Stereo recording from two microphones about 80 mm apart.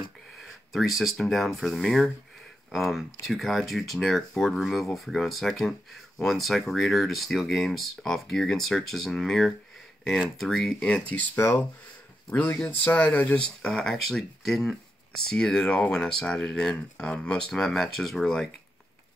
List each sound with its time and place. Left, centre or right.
0.4 s speech: centre
10.9 s speech: centre
11.3 s speech: left
12.3 s speech: left; by 18.5 s centre